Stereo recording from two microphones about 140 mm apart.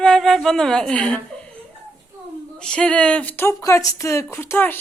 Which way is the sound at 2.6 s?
5° left (ahead or behind).